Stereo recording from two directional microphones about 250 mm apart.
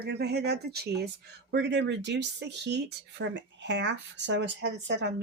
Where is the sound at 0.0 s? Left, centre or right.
Right.